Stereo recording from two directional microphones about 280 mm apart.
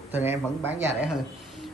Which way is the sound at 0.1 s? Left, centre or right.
Centre.